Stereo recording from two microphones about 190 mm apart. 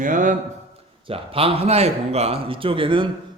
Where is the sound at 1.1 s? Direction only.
30° right (ahead or behind).